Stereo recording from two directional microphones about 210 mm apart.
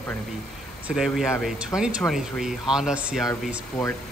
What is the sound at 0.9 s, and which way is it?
Speech, centre (ahead or behind).